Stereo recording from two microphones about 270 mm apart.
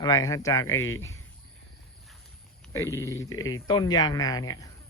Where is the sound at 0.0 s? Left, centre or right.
Centre.